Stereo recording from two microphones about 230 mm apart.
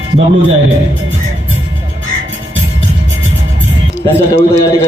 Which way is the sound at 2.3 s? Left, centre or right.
Right.